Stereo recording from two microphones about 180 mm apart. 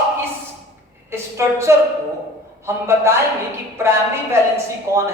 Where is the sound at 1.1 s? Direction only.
15° right (ahead or behind).